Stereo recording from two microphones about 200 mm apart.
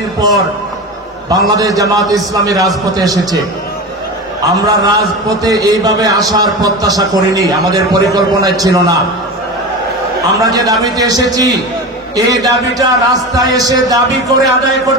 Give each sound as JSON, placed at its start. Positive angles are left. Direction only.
{"t": 1.3, "sound": "a man's voice", "side_deg": -20}
{"t": 4.5, "sound": "a man's voice", "side_deg": -20}
{"t": 10.3, "sound": "a man's voice", "side_deg": -20}